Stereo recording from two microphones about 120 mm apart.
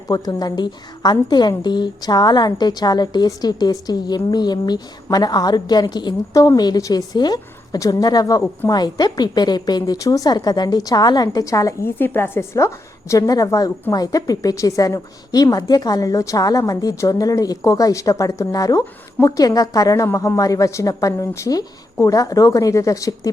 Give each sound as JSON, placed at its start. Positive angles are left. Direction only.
{"t": 0.1, "sound": "a woman's voice", "side_deg": 35}